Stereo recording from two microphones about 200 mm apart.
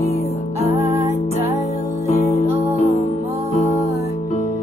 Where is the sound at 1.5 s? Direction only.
35° left (ahead or behind).